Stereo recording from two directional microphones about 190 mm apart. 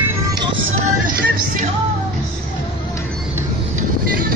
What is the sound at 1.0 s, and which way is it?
Vehicle, 50° right (ahead or behind).